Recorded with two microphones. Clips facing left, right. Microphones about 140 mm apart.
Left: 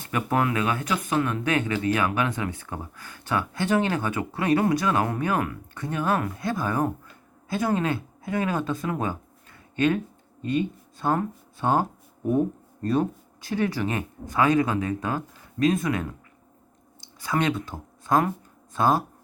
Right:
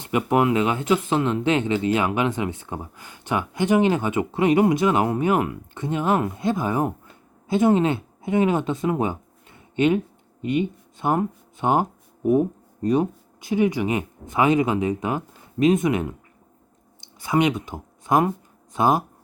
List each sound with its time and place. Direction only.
0.0 s speech: 20° right (ahead or behind)